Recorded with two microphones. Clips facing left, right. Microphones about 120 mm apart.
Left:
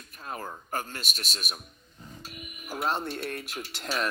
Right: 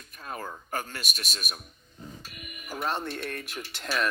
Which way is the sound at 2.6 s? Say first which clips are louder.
Left 1 dB; 10° left (ahead or behind).